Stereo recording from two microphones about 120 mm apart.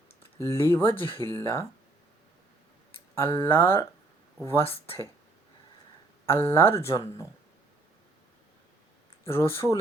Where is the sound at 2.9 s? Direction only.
45° left (ahead or behind).